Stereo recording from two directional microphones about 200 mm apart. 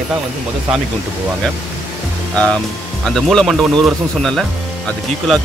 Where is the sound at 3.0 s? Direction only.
Centre (ahead or behind).